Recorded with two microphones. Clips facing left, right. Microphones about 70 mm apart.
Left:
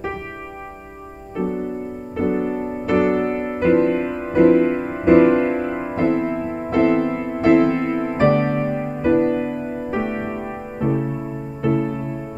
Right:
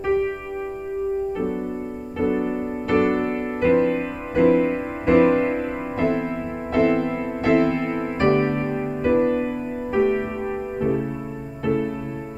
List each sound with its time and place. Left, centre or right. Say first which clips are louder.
1.4 s music: left 2 dB; centre
7.8 s music: left 3 dB; centre
8.2 s music: left 2 dB; left